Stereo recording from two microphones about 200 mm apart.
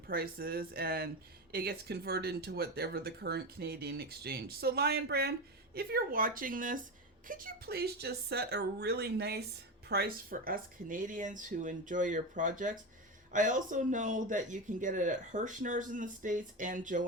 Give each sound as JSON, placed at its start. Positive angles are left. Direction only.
{"t": 0.1, "sound": "speech", "side_deg": -50}